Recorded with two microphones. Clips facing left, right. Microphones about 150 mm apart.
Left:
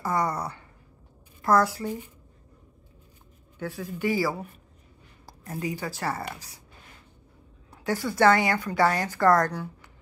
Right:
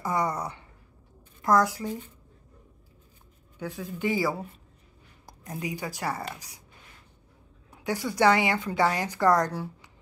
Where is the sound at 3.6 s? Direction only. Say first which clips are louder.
Left 1 dB; 20° right (ahead or behind).